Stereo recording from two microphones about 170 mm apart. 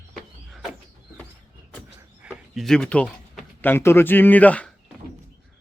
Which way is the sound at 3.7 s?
15° left (ahead or behind).